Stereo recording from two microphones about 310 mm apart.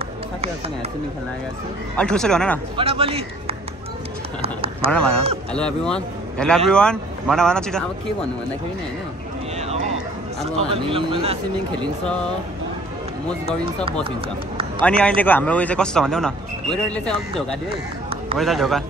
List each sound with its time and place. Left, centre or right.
2.0 s speech: centre
2.8 s speech: centre
5.5 s speech: centre
10.4 s speech: centre
14.8 s speech: centre